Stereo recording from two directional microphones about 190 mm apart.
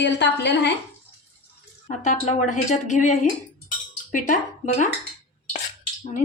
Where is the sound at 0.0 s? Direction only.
65° left (ahead or behind).